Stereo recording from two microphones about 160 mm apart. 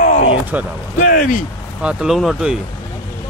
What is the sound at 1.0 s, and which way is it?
Speech, 55° left (ahead or behind).